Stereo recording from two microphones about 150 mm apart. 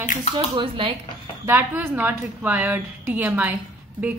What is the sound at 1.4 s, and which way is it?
A woman's voice, 15° right (ahead or behind).